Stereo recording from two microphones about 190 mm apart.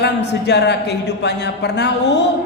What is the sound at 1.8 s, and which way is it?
Speech, 65° left (ahead or behind).